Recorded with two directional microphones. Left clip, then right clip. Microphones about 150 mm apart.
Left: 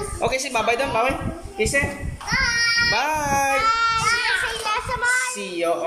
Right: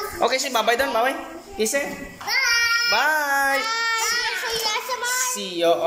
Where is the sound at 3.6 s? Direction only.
Centre (ahead or behind).